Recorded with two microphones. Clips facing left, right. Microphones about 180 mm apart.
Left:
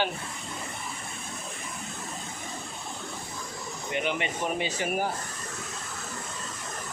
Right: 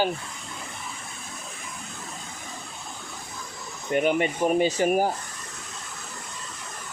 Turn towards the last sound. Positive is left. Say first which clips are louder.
# right 7 dB
turn(degrees=-40)  # may be behind; listen again after turning